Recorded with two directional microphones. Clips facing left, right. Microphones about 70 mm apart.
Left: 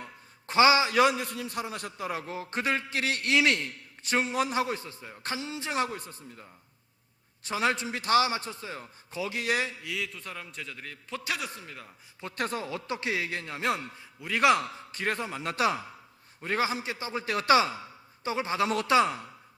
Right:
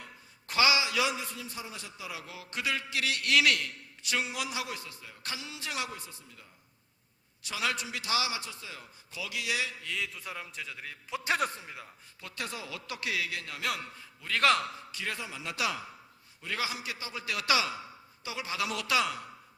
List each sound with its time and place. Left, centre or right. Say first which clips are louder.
0.0 s a man's voice: left 5 dB; left
9.8 s a man's voice: left 1 dB; centre
12.4 s a man's voice: left 7 dB; left
14.3 s a man's voice: left 3 dB; centre
14.9 s a man's voice: left 8 dB; left